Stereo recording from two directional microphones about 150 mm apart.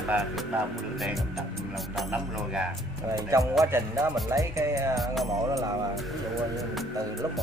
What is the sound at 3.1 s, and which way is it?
Speech, 20° right (ahead or behind).